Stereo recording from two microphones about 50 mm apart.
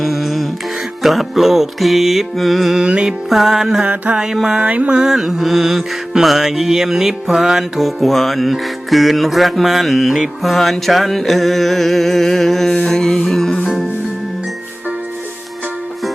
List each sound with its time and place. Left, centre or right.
0.0 s music: centre
1.0 s mantra: centre
2.7 s mantra: centre
3.2 s music: centre
3.8 s mantra: right
5.0 s mantra: centre
12.7 s music: centre